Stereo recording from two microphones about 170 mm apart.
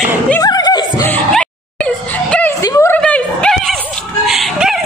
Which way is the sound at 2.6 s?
20° left (ahead or behind).